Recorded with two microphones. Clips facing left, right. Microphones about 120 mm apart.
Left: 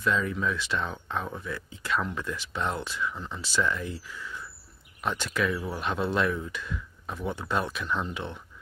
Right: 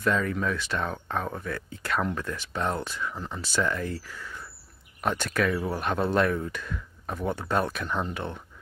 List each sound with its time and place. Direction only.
0.0 s speech: 50° right (ahead or behind)